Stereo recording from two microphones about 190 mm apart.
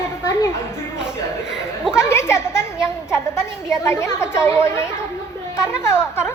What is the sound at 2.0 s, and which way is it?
A woman's voice, 15° left (ahead or behind).